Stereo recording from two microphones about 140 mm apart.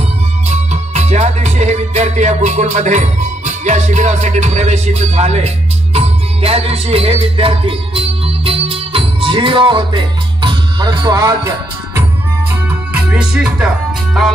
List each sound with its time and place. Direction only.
0.5 s music: 55° right (ahead or behind); by 12.0 s 25° right (ahead or behind)
12.6 s music: 10° right (ahead or behind)